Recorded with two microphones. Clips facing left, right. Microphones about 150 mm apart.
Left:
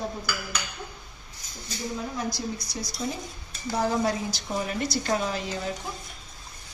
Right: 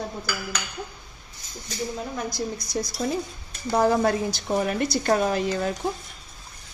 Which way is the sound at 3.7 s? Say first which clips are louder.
Right 5 dB; 55° right (ahead or behind).